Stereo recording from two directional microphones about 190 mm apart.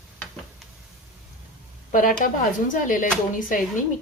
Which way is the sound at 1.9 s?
45° left (ahead or behind).